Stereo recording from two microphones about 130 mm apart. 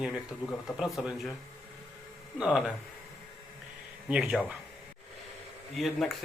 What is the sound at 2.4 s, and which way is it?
Speech, 5° right (ahead or behind).